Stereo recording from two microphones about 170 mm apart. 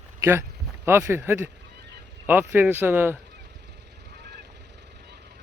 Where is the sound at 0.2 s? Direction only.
15° right (ahead or behind).